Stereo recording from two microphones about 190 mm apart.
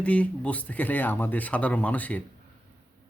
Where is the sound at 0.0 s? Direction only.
5° left (ahead or behind).